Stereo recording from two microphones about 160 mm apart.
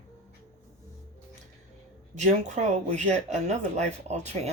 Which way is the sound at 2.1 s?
45° right (ahead or behind).